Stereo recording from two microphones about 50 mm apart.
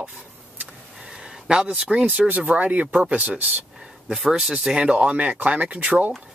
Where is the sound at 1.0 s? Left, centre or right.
Centre.